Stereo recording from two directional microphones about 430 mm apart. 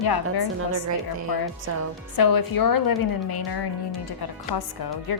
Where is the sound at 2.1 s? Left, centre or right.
Left.